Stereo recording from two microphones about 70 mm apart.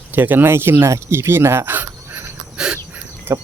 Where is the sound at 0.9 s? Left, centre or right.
Right.